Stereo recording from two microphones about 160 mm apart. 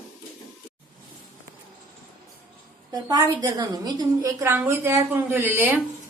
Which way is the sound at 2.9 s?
20° right (ahead or behind).